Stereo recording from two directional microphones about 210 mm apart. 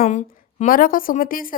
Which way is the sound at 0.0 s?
35° left (ahead or behind).